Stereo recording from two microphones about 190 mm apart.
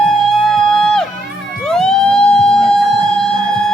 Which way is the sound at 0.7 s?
5° left (ahead or behind).